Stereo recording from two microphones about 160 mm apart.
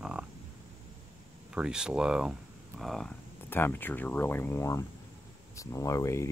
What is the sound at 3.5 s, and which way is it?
Speech, 15° left (ahead or behind).